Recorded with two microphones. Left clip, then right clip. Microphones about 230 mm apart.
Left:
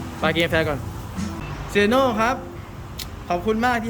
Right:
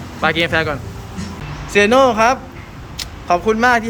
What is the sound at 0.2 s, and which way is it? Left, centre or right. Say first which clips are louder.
Speech: right 4 dB; centre.